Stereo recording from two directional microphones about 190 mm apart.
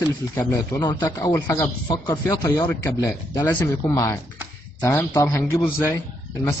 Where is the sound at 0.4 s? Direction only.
20° left (ahead or behind).